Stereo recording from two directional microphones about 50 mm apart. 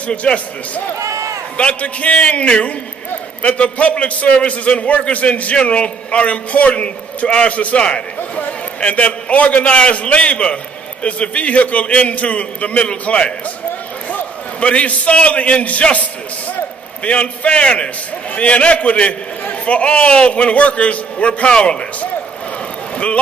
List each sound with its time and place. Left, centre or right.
0.1 s a man's voice: left
0.9 s run: right
1.6 s a man's voice: left